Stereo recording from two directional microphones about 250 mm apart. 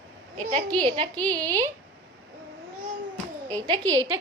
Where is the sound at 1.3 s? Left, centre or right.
Centre.